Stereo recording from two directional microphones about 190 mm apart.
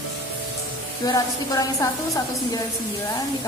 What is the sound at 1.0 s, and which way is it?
A woman's voice, 20° left (ahead or behind).